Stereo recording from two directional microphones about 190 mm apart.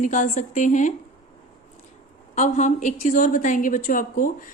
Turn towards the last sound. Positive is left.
turn(degrees=45)  # may be behind; listen again after turning